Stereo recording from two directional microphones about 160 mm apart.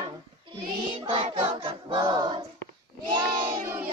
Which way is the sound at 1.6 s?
30° right (ahead or behind).